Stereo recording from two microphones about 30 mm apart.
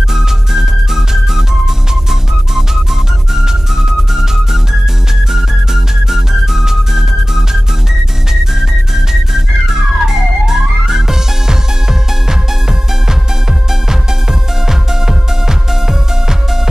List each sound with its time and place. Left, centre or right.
0.1 s music: centre
8.5 s music: centre
14.7 s music: centre